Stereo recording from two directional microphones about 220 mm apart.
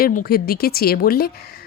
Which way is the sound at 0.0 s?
40° left (ahead or behind).